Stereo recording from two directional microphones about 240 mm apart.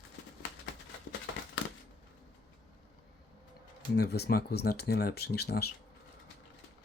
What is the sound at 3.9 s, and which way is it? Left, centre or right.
Speech, left.